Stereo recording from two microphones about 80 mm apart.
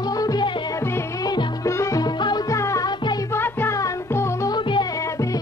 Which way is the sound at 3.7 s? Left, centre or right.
Left.